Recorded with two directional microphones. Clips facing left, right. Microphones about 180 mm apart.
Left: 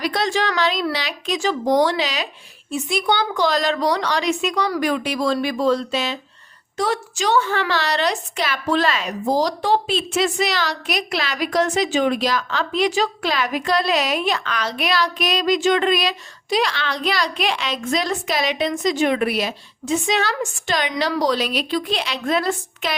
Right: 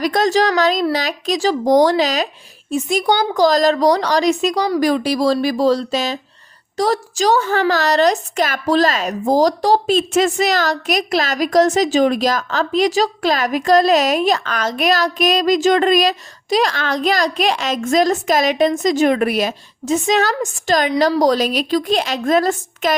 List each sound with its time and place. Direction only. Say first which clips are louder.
0.0 s a woman's voice: right 6 dB; 45° right (ahead or behind)